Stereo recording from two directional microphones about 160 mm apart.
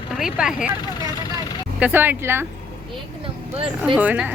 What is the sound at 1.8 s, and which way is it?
Speech, 10° right (ahead or behind).